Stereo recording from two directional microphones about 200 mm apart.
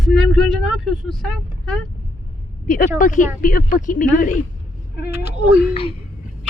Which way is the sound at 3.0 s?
40° left (ahead or behind).